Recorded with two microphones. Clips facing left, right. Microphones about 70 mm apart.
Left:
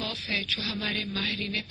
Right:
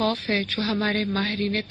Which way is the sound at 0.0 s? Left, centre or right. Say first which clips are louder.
Right 10 dB; right.